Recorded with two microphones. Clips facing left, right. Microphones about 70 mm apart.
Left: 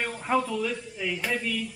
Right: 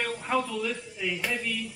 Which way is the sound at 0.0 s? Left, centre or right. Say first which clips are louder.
Left 2 dB; centre.